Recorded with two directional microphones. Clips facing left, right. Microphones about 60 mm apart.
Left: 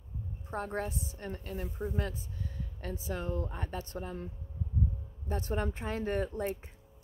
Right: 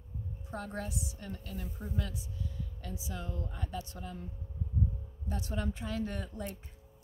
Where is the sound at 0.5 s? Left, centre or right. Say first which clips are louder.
Left 4 dB; left.